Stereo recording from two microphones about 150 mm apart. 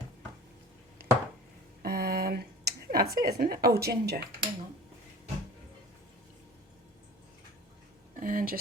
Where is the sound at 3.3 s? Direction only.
85° right.